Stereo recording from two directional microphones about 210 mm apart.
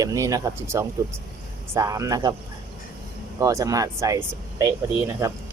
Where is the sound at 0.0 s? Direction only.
15° right (ahead or behind).